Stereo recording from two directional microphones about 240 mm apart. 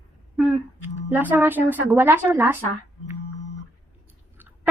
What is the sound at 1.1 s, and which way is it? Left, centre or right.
A woman's voice, centre.